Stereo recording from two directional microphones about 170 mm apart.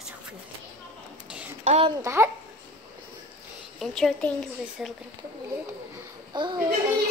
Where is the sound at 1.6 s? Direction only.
40° right (ahead or behind).